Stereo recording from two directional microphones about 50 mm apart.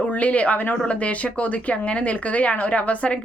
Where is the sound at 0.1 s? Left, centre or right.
Left.